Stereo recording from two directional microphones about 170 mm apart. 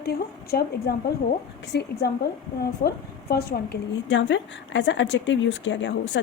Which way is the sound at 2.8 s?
60° left (ahead or behind).